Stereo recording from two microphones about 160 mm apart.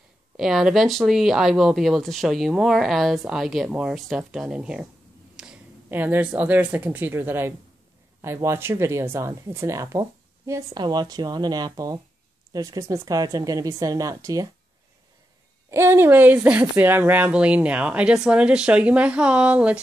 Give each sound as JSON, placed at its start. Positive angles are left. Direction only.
{"t": 0.4, "sound": "speech", "side_deg": 0}
{"t": 15.7, "sound": "speech", "side_deg": -15}